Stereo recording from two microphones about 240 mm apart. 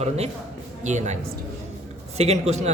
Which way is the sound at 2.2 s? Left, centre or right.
Right.